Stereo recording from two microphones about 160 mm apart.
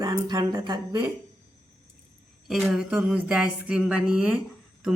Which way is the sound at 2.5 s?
Centre (ahead or behind).